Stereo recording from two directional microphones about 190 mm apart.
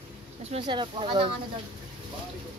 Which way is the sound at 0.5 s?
25° right (ahead or behind).